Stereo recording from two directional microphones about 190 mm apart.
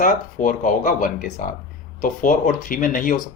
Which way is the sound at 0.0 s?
45° left (ahead or behind).